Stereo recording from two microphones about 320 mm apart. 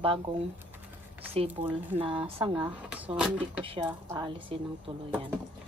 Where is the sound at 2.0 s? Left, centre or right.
Centre.